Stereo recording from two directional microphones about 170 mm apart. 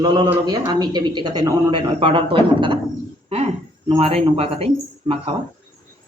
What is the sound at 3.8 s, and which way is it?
Speech, 35° right (ahead or behind).